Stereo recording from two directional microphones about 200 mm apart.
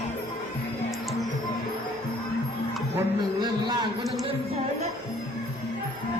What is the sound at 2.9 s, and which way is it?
Speech, 20° right (ahead or behind).